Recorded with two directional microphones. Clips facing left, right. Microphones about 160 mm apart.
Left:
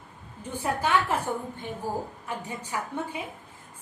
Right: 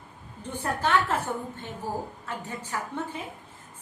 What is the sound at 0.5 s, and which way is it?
Speech, 10° left (ahead or behind).